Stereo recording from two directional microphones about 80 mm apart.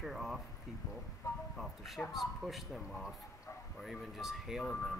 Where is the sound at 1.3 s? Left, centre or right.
Left.